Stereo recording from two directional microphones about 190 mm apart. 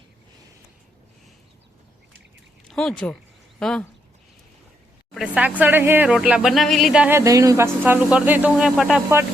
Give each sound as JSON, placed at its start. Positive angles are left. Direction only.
{"t": 2.6, "sound": "speech", "side_deg": 0}
{"t": 5.1, "sound": "speech", "side_deg": -5}